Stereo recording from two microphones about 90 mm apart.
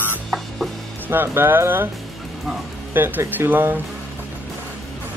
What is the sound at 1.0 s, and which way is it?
Speech, 25° right (ahead or behind).